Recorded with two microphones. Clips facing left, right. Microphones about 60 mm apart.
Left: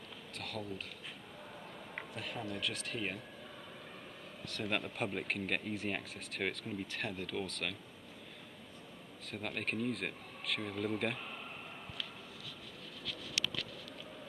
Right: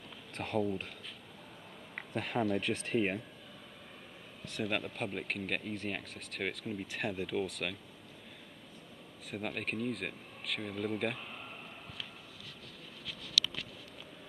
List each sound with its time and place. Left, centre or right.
0.4 s speech: right
2.1 s speech: right
4.6 s speech: centre
6.9 s speech: centre
9.3 s speech: centre
13.4 s patter: left